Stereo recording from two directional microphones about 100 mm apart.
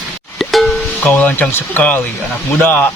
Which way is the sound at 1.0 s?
20° left (ahead or behind).